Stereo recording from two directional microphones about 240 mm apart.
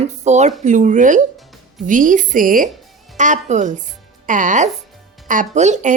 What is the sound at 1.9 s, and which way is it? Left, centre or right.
A woman's voice, right.